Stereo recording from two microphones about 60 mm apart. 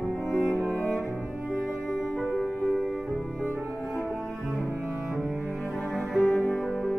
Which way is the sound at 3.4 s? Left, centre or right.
Right.